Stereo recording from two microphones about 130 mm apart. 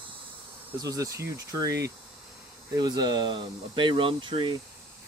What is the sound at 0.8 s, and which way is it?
Speech, 25° right (ahead or behind).